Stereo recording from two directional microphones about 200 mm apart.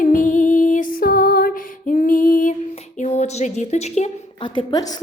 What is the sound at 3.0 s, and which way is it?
A woman's voice, 35° left (ahead or behind).